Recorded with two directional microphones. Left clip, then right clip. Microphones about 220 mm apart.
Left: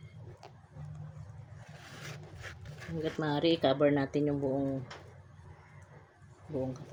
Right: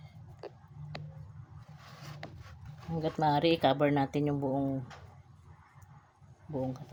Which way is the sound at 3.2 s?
50° right (ahead or behind).